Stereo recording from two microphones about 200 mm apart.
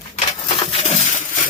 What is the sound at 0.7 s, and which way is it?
Coin, 30° left (ahead or behind).